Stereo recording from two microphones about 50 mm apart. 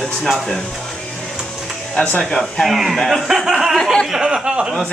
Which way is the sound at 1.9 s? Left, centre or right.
Left.